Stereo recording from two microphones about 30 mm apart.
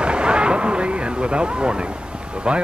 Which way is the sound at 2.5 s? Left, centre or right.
Right.